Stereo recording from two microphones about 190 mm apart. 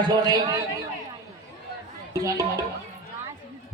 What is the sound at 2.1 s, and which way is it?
Speech, 15° right (ahead or behind).